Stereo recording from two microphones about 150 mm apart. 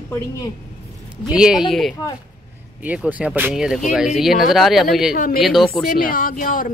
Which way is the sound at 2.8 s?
10° right (ahead or behind).